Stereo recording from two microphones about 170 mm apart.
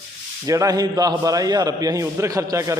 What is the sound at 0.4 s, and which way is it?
A man's voice, 20° right (ahead or behind).